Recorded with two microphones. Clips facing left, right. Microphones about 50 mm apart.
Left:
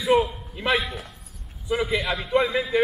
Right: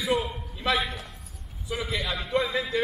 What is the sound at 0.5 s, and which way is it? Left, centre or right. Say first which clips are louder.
Speech: left 3 dB; left.